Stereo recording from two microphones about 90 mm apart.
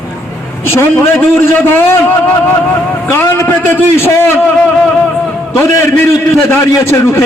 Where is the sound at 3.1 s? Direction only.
25° left (ahead or behind).